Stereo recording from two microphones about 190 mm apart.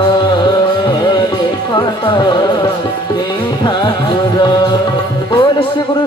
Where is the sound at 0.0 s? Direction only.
25° left (ahead or behind).